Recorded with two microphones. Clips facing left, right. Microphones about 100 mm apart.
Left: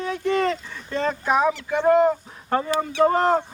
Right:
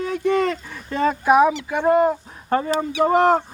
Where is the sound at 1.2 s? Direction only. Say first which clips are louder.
Right 6 dB; 10° right (ahead or behind).